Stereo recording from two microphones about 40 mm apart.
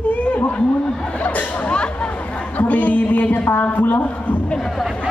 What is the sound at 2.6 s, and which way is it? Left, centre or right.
A man's voice, left.